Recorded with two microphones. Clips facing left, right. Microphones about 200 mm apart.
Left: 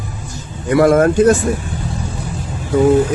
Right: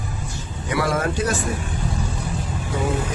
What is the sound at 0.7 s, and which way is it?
Speech, 50° left (ahead or behind).